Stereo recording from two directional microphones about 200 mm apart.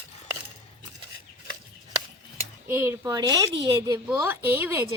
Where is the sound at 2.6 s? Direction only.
10° right (ahead or behind).